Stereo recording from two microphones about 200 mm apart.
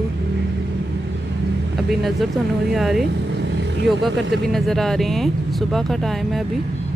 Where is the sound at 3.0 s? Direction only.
65° right (ahead or behind).